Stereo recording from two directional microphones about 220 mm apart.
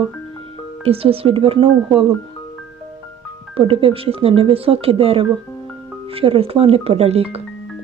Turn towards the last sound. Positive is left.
turn(degrees=-25)  # may be behind; listen again after turning